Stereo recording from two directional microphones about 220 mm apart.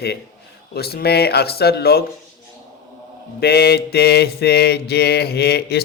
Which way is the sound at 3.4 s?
45° left (ahead or behind).